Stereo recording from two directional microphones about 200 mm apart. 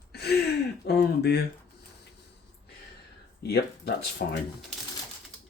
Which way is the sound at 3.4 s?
55° left (ahead or behind).